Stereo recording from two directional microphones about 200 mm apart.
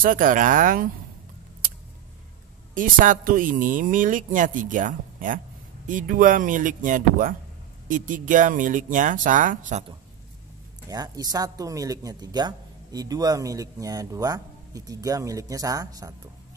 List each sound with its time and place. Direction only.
0.0 s speech: 40° right (ahead or behind)
2.7 s speech: 40° right (ahead or behind)
10.9 s speech: 20° right (ahead or behind)